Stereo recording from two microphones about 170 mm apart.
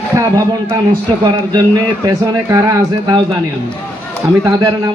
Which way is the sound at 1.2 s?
25° right (ahead or behind).